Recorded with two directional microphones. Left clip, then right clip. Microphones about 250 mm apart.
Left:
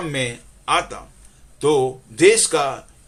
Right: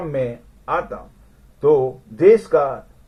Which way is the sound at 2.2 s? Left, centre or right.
Left.